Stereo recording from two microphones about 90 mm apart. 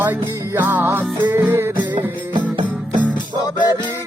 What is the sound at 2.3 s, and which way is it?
Music, 60° right (ahead or behind).